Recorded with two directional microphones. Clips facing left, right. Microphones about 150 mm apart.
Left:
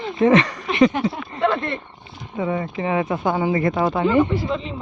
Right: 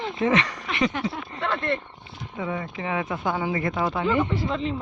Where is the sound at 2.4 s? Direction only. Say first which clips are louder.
Left 6 dB; 35° left (ahead or behind).